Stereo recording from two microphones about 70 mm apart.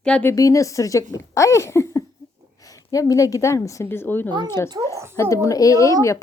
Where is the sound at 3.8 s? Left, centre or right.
Left.